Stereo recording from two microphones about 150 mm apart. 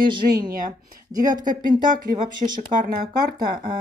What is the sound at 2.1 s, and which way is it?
Speech, 50° right (ahead or behind).